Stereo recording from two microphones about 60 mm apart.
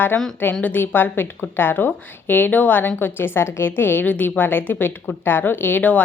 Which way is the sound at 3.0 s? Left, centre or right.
Left.